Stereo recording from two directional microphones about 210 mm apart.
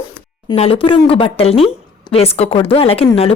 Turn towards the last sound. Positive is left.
turn(degrees=25)  # may be behind; listen again after turning